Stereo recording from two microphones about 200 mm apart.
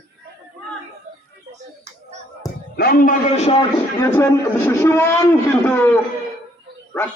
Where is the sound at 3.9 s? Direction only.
15° left (ahead or behind).